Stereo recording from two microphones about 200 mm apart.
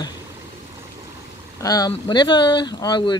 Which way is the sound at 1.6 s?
15° left (ahead or behind).